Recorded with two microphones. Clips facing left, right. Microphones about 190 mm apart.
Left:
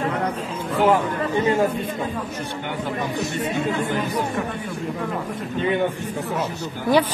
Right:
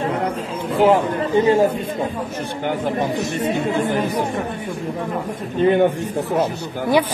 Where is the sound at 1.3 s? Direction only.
25° right (ahead or behind).